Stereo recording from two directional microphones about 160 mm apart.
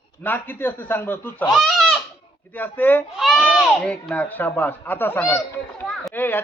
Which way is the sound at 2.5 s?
10° left (ahead or behind).